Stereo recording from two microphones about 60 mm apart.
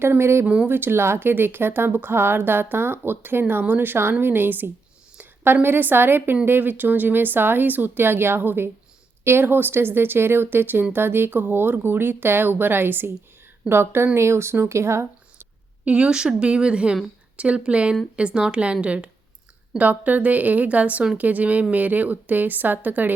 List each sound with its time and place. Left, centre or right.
0.0 s speech: right
0.4 s a woman's voice: centre
0.7 s speech: right
5.1 s a sound: right
5.6 s speech: right
15.8 s a woman's voice: centre